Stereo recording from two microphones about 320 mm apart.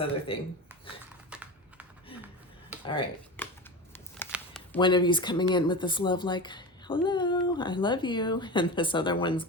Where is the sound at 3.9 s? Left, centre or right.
Centre.